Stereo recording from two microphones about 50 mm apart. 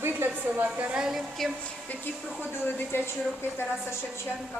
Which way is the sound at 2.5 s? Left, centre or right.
Left.